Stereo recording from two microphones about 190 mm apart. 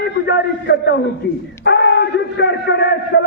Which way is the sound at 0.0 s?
60° left (ahead or behind).